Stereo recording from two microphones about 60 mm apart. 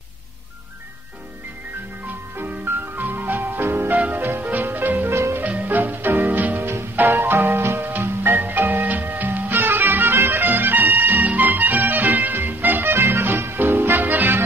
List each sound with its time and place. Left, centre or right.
2.3 s music: right
3.9 s music: right
5.1 s music: right
5.4 s music: right